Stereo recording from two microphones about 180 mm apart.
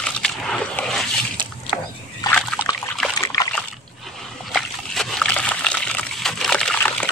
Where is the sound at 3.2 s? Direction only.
20° left (ahead or behind).